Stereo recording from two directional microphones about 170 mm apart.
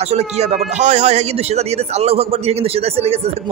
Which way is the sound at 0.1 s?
40° right (ahead or behind).